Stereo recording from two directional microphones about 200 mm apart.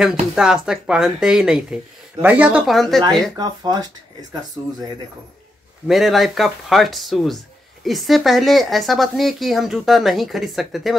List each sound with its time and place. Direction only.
0.4 s speech: 5° right (ahead or behind)
3.3 s speech: 20° right (ahead or behind)
5.9 s speech: centre (ahead or behind)